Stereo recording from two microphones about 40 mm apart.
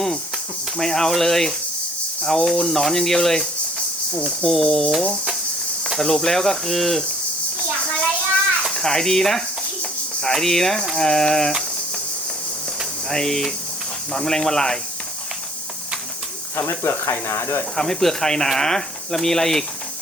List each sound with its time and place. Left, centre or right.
0.8 s speech: centre
4.4 s speech: centre
6.0 s speech: centre
8.8 s speech: centre
13.1 s speech: centre
16.6 s speech: left
17.7 s speech: centre